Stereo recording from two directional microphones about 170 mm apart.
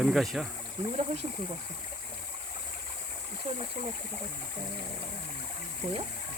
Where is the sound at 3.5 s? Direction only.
45° right (ahead or behind).